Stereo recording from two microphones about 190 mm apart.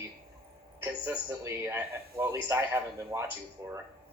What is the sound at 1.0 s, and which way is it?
A man's voice, 10° right (ahead or behind).